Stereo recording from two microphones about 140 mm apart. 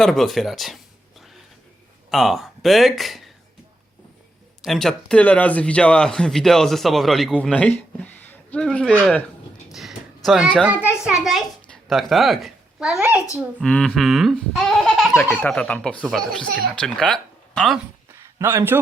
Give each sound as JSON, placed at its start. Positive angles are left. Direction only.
{"t": 0.0, "sound": "speech", "side_deg": 0}
{"t": 2.0, "sound": "speech", "side_deg": 0}
{"t": 4.6, "sound": "speech", "side_deg": 0}
{"t": 10.2, "sound": "a child's voice", "side_deg": -5}
{"t": 13.3, "sound": "speech", "side_deg": 5}
{"t": 15.2, "sound": "speech", "side_deg": 15}
{"t": 18.3, "sound": "a man's voice", "side_deg": -15}